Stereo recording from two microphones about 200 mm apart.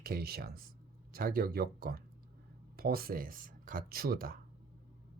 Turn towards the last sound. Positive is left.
turn(degrees=-45)  # may be behind; listen again after turning